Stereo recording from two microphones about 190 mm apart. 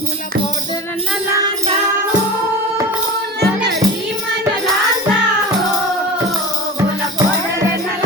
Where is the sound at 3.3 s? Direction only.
60° right (ahead or behind).